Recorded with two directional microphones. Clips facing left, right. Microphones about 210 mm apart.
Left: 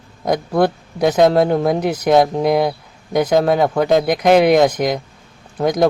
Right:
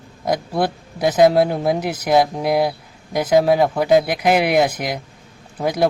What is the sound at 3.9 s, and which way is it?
Speech, 5° right (ahead or behind).